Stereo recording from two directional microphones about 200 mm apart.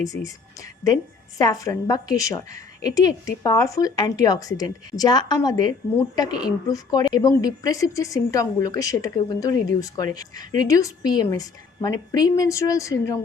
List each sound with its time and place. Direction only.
0.0 s a woman's voice: 15° left (ahead or behind)